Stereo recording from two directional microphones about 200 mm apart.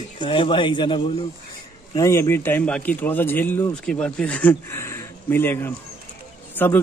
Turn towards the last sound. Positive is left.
turn(degrees=10)  # may be behind; listen again after turning